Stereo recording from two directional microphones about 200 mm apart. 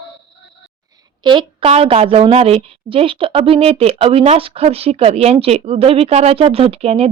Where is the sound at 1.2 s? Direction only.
25° right (ahead or behind).